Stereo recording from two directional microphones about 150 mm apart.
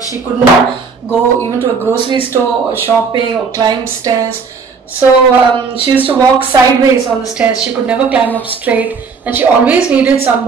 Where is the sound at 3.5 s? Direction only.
25° right (ahead or behind).